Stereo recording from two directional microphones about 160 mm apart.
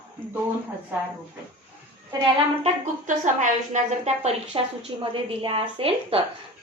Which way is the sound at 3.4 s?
45° right (ahead or behind).